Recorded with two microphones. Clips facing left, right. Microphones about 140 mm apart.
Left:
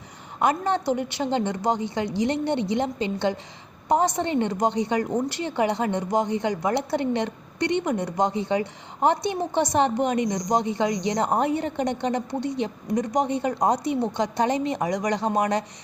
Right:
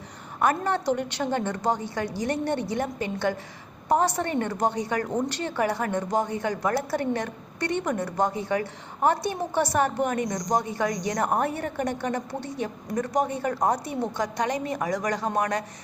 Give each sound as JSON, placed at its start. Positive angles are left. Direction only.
{"t": 0.4, "sound": "a woman's voice", "side_deg": 15}